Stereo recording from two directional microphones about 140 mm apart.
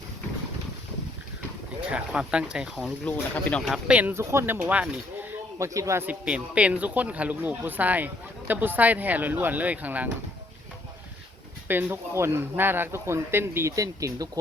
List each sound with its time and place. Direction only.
1.9 s speech: 5° right (ahead or behind)
2.7 s speech: 5° left (ahead or behind)
3.7 s speech: 10° right (ahead or behind)
5.5 s speech: 20° right (ahead or behind)
11.7 s speech: 15° right (ahead or behind)